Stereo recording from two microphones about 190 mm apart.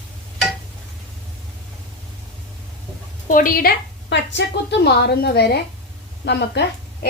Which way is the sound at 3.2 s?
45° left (ahead or behind).